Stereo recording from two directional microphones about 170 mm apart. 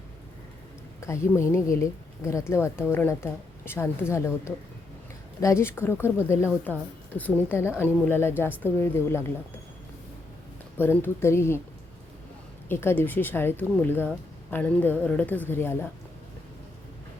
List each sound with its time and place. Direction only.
1.0 s a woman's voice: 15° left (ahead or behind)
10.8 s a woman's voice: 15° left (ahead or behind)
12.6 s a woman's voice: 15° left (ahead or behind)